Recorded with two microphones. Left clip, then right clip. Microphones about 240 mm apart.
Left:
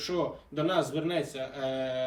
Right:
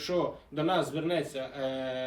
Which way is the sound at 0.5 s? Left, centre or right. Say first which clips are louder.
Left 1 dB; centre.